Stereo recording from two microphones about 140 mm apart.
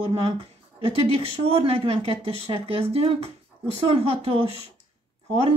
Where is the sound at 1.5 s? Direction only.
40° right (ahead or behind).